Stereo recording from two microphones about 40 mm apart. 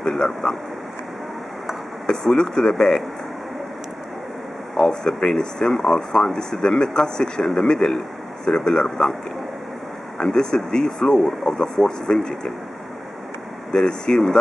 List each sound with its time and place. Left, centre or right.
0.1 s speech: centre
2.0 s speech: centre
4.7 s speech: centre
10.1 s speech: centre
13.7 s speech: centre